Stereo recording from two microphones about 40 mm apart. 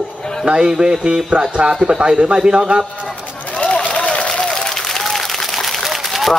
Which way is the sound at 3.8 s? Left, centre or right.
Left.